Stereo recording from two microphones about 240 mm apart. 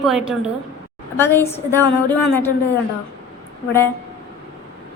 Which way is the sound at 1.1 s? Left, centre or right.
Centre.